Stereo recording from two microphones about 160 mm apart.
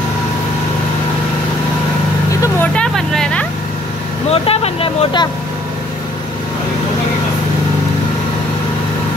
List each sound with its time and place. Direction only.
2.4 s vehicle: 10° left (ahead or behind)
4.3 s vehicle: 40° left (ahead or behind)